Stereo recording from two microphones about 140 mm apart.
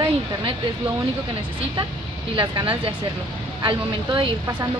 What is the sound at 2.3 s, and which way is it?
Speech, 30° right (ahead or behind).